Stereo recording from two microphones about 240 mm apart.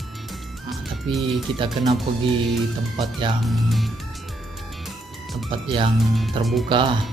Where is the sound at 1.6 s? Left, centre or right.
Right.